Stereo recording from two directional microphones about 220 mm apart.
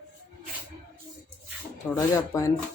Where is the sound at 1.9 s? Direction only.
10° left (ahead or behind).